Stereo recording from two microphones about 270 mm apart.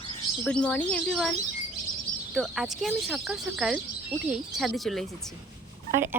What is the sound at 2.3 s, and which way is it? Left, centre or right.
Speech, centre.